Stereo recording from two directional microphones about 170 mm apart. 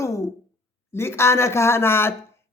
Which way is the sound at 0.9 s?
15° left (ahead or behind).